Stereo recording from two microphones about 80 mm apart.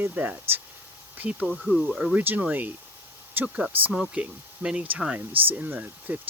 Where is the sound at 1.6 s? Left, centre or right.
Centre.